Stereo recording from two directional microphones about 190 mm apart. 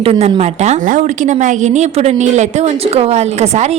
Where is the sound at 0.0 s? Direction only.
30° right (ahead or behind).